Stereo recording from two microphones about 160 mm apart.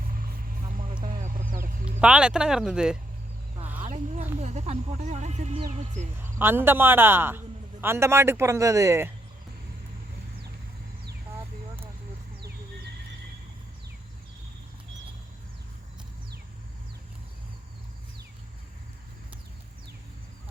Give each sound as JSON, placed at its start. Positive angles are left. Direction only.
{"t": 0.1, "sound": "vehicle", "side_deg": -60}
{"t": 1.0, "sound": "a sound", "side_deg": -60}
{"t": 2.0, "sound": "speech", "side_deg": -5}
{"t": 3.8, "sound": "a sound", "side_deg": -50}
{"t": 4.4, "sound": "speech", "side_deg": -45}
{"t": 6.4, "sound": "a man's voice", "side_deg": -15}